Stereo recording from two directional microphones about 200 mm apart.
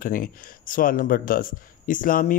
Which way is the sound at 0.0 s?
45° left (ahead or behind).